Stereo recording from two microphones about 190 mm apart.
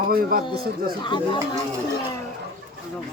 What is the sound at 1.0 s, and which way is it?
Speech, 25° left (ahead or behind).